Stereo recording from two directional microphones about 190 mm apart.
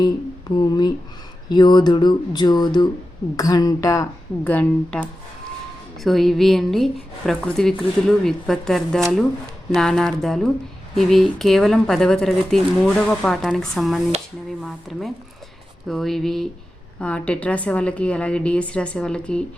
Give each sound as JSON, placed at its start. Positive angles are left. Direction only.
{"t": 0.0, "sound": "a woman's voice", "side_deg": 20}